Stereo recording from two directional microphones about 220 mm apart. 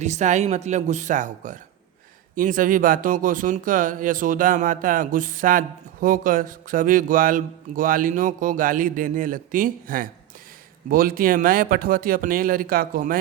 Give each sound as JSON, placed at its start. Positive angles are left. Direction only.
{"t": 0.0, "sound": "speech", "side_deg": -30}